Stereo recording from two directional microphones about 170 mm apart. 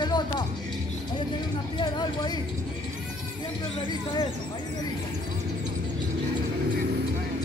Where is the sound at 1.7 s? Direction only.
25° left (ahead or behind).